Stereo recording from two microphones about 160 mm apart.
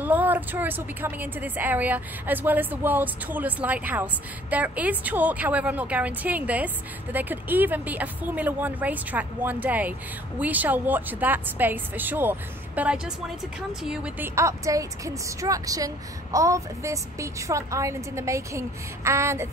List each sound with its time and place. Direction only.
0.0 s a woman's voice: 10° right (ahead or behind)